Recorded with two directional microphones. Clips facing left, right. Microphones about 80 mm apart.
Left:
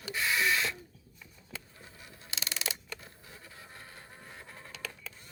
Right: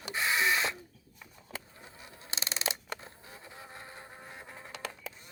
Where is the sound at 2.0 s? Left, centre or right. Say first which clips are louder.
Right 2 dB; right.